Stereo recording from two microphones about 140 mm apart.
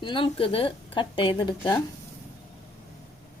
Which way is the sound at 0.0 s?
40° left (ahead or behind).